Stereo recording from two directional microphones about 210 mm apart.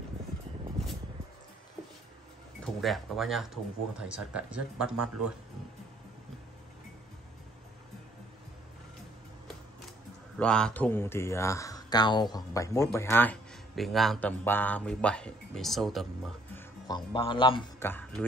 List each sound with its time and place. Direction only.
2.6 s speech: centre (ahead or behind)
10.3 s speech: 5° left (ahead or behind)
16.8 s a man's voice: 20° left (ahead or behind)
17.7 s speech: 10° left (ahead or behind)